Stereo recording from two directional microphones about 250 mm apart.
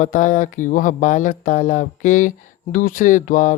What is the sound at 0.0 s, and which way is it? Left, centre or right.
Speech, left.